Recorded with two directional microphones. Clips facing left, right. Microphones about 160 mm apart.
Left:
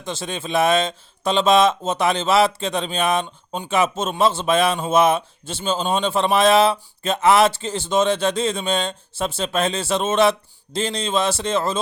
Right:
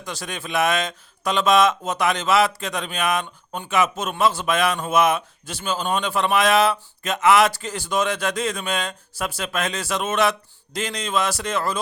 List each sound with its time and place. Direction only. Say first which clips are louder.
0.0 s speech: left 4 dB; 25° left (ahead or behind)